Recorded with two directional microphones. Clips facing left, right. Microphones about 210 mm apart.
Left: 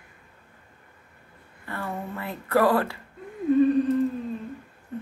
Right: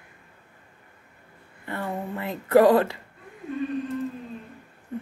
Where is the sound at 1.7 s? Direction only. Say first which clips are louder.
Right 2 dB; 20° right (ahead or behind).